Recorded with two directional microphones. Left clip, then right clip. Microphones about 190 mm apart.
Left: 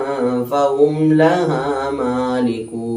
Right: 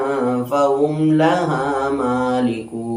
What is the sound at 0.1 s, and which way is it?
Mantra, 5° left (ahead or behind).